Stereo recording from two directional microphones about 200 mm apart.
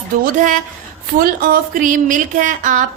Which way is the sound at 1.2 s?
45° right (ahead or behind).